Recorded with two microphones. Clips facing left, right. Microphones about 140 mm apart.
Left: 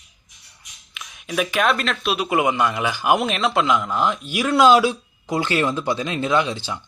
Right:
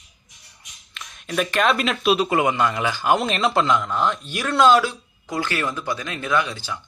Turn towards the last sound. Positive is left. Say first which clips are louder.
# left 2 dB
turn(degrees=20)  # may be behind; listen again after turning